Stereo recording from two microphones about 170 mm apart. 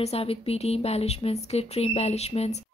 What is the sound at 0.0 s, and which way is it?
Speech, 35° left (ahead or behind).